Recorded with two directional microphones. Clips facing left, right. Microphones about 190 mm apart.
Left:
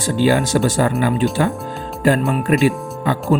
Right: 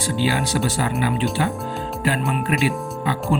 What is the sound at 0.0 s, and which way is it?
Speech, 45° left (ahead or behind).